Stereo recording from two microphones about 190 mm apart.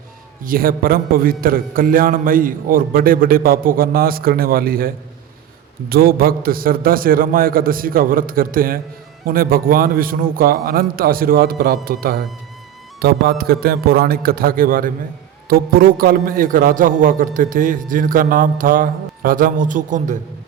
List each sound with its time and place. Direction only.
0.4 s a man's voice: 50° right (ahead or behind)
5.9 s a man's voice: 50° right (ahead or behind)